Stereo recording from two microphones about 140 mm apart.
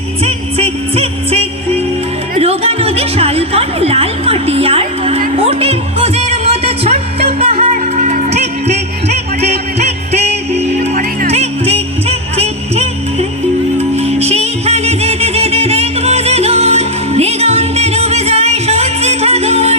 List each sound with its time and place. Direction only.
0.3 s music: 45° right (ahead or behind)